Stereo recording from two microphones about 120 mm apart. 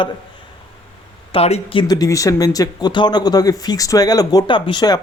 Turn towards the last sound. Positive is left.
turn(degrees=35)  # may be behind; listen again after turning